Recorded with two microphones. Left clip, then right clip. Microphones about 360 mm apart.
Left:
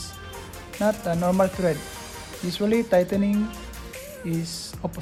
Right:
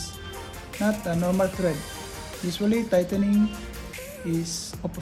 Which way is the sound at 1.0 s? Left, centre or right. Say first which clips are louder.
Left 3 dB; left.